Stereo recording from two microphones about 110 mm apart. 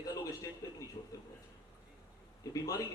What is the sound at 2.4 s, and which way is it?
Speech, 30° left (ahead or behind).